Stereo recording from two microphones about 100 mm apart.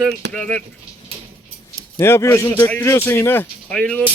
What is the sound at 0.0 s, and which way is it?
Speech, 10° left (ahead or behind).